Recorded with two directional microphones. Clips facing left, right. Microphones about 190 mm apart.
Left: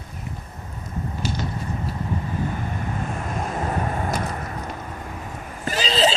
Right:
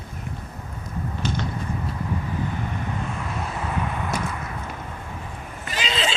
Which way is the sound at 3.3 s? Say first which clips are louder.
Left 5 dB; 45° left (ahead or behind).